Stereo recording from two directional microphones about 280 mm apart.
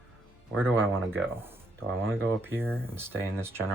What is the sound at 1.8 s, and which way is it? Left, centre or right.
Speech, right.